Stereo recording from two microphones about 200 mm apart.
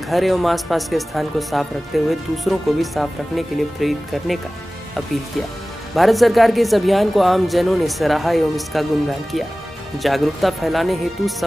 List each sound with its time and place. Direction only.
0.1 s speech: centre (ahead or behind)
5.9 s speech: centre (ahead or behind)
9.9 s speech: centre (ahead or behind)